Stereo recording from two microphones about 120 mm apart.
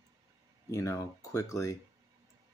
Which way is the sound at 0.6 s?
25° left (ahead or behind).